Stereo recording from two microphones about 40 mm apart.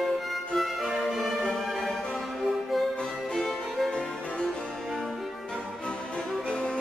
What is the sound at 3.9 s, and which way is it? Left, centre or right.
Music, left.